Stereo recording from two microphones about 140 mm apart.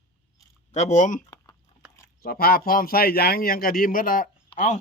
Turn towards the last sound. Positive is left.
turn(degrees=65)  # may be behind; listen again after turning